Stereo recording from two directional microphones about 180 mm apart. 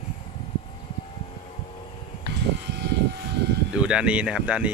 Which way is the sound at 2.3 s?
70° right (ahead or behind).